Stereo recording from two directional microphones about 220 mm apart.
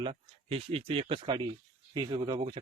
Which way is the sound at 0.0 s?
25° right (ahead or behind).